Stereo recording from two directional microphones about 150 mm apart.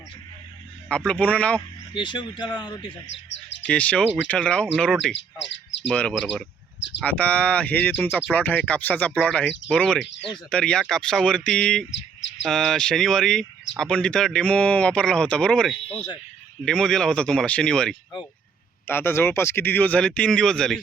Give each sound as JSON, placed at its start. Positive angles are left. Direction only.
{"t": 0.9, "sound": "speech", "side_deg": 5}
{"t": 1.9, "sound": "speech", "side_deg": 30}
{"t": 3.7, "sound": "speech", "side_deg": 10}
{"t": 18.9, "sound": "speech", "side_deg": 15}